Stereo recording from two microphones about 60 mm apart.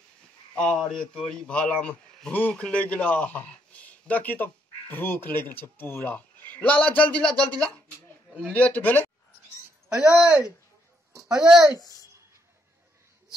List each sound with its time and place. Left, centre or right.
0.8 s speech: centre
1.5 s a man's voice: centre
7.3 s speech: right
8.5 s a man's voice: left
9.8 s speech: centre